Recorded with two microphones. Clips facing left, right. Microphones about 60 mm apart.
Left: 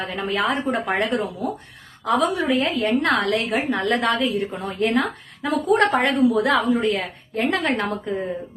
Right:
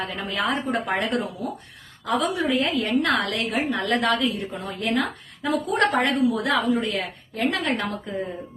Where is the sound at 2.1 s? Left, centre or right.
Left.